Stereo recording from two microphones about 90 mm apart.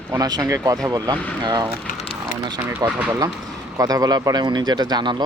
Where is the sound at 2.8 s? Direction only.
30° right (ahead or behind).